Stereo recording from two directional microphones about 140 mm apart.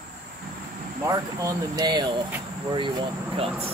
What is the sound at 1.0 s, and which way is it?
Speech, 25° right (ahead or behind).